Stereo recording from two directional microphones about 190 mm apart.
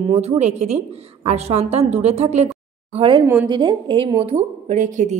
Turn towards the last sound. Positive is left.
turn(degrees=-40)  # may be behind; listen again after turning